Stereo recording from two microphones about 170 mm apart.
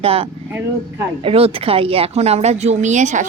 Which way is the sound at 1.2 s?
35° right (ahead or behind).